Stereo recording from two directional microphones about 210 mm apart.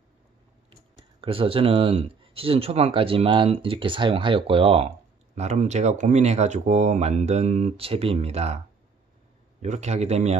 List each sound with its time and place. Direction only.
1.2 s speech: 25° right (ahead or behind)
9.6 s a man's voice: 30° right (ahead or behind)